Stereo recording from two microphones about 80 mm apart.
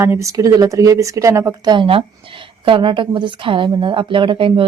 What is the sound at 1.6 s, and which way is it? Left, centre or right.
Speech, right.